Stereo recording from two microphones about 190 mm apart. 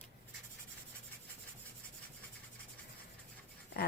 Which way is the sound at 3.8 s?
55° left (ahead or behind).